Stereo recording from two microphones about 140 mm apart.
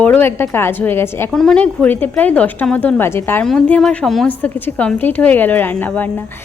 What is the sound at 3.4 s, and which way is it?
A woman's voice, 5° left (ahead or behind).